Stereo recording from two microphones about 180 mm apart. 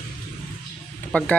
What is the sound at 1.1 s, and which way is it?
Speech, 10° left (ahead or behind).